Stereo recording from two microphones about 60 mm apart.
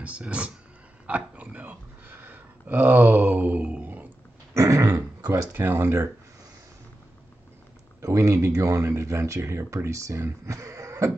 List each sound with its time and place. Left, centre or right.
0.0 s speech: right
4.6 s speech: right
5.3 s speech: right
8.0 s speech: right